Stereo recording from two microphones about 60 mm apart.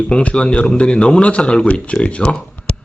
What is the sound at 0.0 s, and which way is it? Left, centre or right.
Speech, left.